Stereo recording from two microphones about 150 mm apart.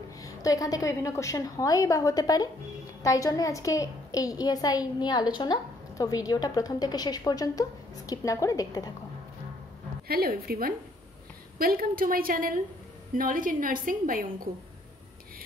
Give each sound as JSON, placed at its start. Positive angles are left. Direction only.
{"t": 0.2, "sound": "a child's voice", "side_deg": 25}
{"t": 10.0, "sound": "a woman's voice", "side_deg": -90}
{"t": 11.5, "sound": "a woman's voice", "side_deg": -75}